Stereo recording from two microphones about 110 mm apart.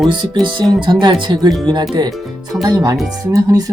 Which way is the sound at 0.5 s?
45° right (ahead or behind).